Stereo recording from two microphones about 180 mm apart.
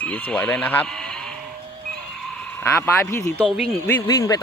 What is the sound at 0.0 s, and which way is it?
Speech, 10° left (ahead or behind).